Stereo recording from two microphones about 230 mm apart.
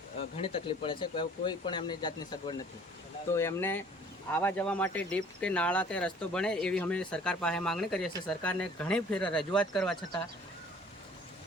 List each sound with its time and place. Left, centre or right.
0.2 s speech: left; by 10.2 s centre